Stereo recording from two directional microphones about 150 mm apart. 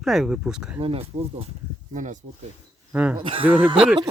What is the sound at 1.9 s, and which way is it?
Speech, 55° right (ahead or behind).